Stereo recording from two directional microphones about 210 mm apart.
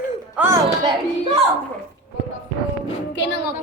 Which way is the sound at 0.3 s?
10° right (ahead or behind).